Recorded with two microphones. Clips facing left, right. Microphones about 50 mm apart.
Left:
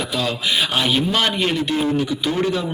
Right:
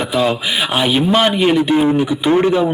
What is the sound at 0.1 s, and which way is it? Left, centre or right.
A man's voice, right.